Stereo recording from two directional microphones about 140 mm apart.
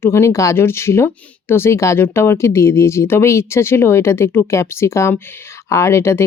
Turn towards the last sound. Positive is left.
turn(degrees=20)  # may be behind; listen again after turning